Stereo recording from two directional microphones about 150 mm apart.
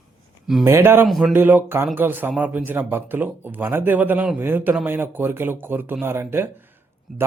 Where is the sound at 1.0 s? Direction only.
Centre (ahead or behind).